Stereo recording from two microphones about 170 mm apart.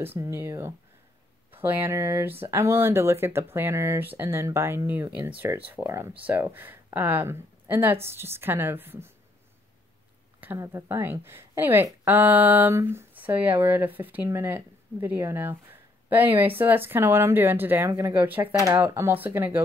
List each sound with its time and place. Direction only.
0.0 s a woman's voice: 15° right (ahead or behind)
10.4 s a woman's voice: 10° right (ahead or behind)